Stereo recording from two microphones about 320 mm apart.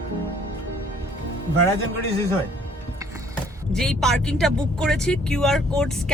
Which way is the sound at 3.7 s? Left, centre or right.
Centre.